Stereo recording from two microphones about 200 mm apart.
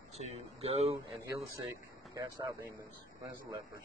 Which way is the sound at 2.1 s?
15° right (ahead or behind).